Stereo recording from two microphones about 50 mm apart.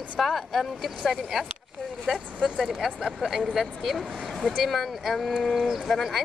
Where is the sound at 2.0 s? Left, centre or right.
Right.